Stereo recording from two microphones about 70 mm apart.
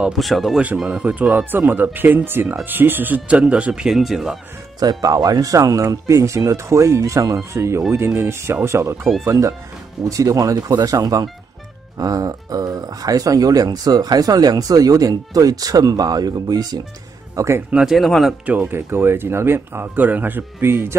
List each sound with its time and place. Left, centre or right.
0.2 s speech: centre
0.8 s speech: centre
3.9 s speech: centre
4.7 s speech: right
10.5 s speech: right
17.7 s speech: centre
18.4 s speech: right
18.8 s speech: right